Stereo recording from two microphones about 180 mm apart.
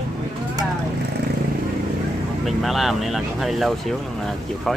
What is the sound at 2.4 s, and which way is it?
Speech, centre (ahead or behind).